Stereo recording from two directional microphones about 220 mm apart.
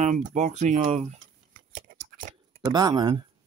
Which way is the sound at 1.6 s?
40° right (ahead or behind).